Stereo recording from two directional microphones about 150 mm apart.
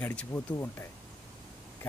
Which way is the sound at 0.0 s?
10° left (ahead or behind).